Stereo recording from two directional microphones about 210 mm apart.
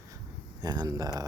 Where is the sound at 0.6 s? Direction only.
20° right (ahead or behind).